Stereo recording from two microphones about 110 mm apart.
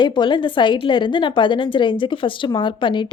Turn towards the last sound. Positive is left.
turn(degrees=45)  # may be behind; listen again after turning